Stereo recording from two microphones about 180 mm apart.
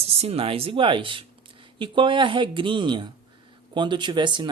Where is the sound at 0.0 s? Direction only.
35° right (ahead or behind).